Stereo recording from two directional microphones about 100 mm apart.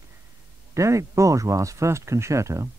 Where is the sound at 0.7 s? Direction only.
30° right (ahead or behind).